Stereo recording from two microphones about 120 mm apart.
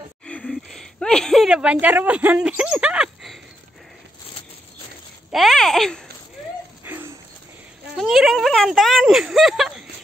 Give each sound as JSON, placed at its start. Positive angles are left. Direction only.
{"t": 0.3, "sound": "speech", "side_deg": 5}
{"t": 5.3, "sound": "speech", "side_deg": 0}
{"t": 6.8, "sound": "a sound", "side_deg": -20}
{"t": 8.0, "sound": "speech", "side_deg": -5}